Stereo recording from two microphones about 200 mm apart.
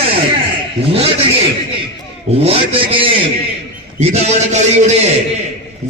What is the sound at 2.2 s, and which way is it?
A man's voice, 30° right (ahead or behind).